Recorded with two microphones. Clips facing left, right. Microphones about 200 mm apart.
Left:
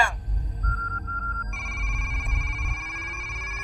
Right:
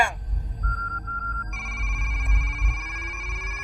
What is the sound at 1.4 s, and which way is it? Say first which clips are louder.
Telephone bell ringing: even; centre (ahead or behind).